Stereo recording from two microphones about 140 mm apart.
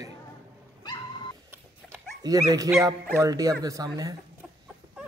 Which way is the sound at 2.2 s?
25° right (ahead or behind).